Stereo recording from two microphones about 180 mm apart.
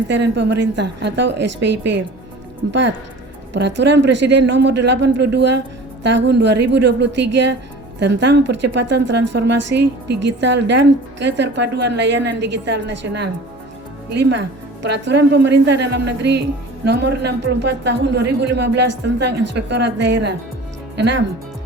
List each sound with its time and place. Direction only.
0.1 s a woman's voice: 75° right (ahead or behind)